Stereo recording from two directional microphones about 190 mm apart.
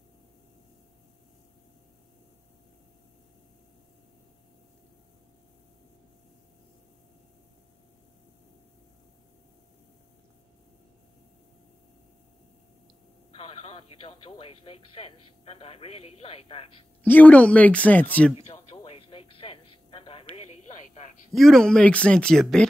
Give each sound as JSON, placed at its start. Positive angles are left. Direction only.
{"t": 13.3, "sound": "speech", "side_deg": 30}
{"t": 17.0, "sound": "speech", "side_deg": 10}
{"t": 18.5, "sound": "music", "side_deg": 30}
{"t": 20.3, "sound": "a sound", "side_deg": 35}
{"t": 21.3, "sound": "speech", "side_deg": 0}